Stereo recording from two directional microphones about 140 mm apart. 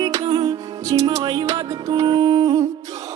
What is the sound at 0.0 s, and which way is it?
Music, 30° right (ahead or behind).